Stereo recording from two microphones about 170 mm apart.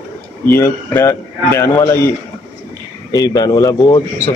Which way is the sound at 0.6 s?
15° left (ahead or behind).